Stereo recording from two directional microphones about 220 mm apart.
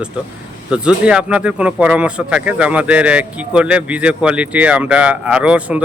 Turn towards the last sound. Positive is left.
turn(degrees=-5)  # may be behind; listen again after turning